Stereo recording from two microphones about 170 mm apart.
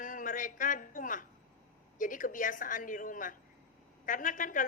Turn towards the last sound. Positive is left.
turn(degrees=50)  # may be behind; listen again after turning